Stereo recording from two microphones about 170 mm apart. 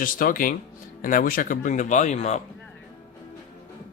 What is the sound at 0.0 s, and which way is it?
Speech, 55° left (ahead or behind).